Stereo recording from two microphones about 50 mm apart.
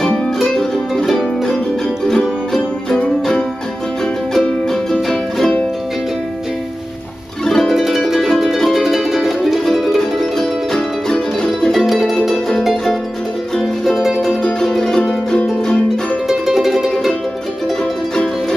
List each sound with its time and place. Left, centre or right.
0.4 s music: centre
4.3 s music: centre
7.4 s music: centre
7.7 s music: centre
9.9 s music: centre
11.8 s music: centre
16.3 s music: centre